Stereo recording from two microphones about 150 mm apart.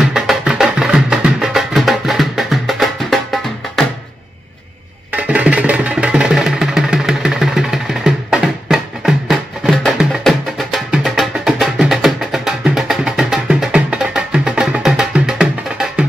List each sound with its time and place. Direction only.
0.0 s music: centre (ahead or behind)
5.1 s music: 10° right (ahead or behind)